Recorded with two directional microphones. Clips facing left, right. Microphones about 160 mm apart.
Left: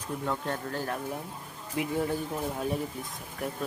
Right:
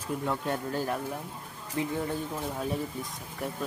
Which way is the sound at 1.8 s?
15° left (ahead or behind).